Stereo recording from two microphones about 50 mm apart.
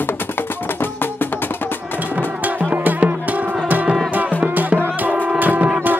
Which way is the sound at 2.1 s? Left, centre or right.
Right.